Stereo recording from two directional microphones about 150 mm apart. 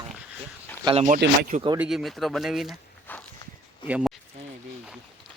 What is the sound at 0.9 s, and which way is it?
Speech, 55° right (ahead or behind).